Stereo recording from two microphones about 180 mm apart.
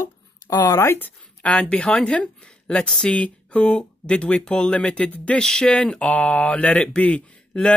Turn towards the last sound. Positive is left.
turn(degrees=5)  # may be behind; listen again after turning